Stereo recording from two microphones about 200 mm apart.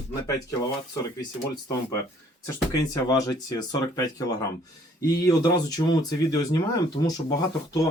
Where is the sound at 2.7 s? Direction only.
15° left (ahead or behind).